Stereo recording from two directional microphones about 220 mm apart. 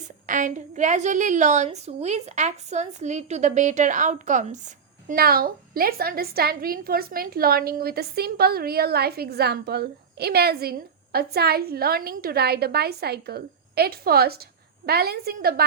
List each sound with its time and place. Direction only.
0.3 s a woman's voice: 35° right (ahead or behind)